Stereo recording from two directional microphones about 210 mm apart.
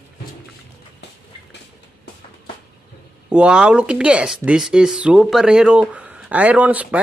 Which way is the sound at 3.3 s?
5° right (ahead or behind).